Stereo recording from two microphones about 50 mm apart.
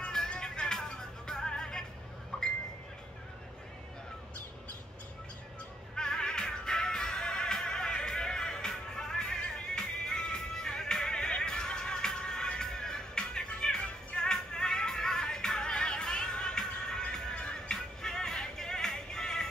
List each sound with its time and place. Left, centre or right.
0.3 s music: centre
2.3 s a sound: centre
5.9 s music: centre